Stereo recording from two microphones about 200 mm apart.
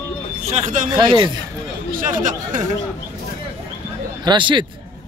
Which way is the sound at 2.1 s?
40° right (ahead or behind).